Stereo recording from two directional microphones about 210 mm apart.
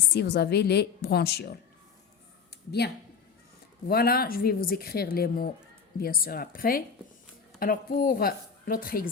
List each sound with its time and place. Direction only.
0.1 s speech: 50° left (ahead or behind)
2.8 s speech: 50° left (ahead or behind)